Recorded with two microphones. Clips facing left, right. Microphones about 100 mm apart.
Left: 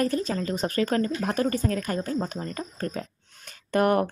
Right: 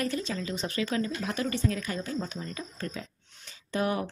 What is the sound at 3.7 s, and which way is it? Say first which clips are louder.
Speech: left 7 dB; 55° left (ahead or behind).